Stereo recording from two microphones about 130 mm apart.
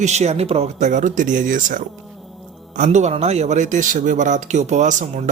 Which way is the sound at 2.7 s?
70° right (ahead or behind).